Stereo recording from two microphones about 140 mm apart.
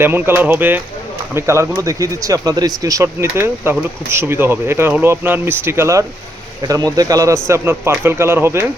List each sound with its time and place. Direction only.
0.0 s a man's voice: 15° right (ahead or behind)